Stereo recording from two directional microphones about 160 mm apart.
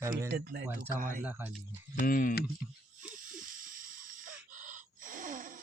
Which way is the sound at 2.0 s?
60° left (ahead or behind).